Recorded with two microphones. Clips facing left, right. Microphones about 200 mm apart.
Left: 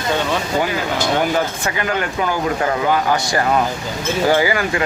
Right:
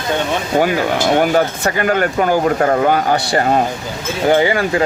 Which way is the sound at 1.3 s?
50° right (ahead or behind).